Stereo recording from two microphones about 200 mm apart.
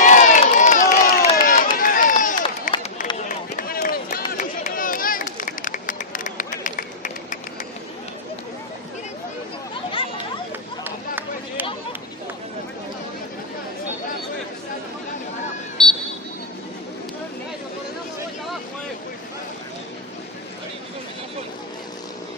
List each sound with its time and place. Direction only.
0.0 s crowd: 40° left (ahead or behind)
1.3 s run: 45° left (ahead or behind)
4.3 s a sound: 45° left (ahead or behind)
10.8 s chatter: 10° right (ahead or behind)